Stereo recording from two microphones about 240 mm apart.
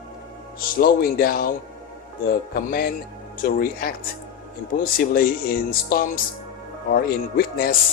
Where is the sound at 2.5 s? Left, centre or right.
Left.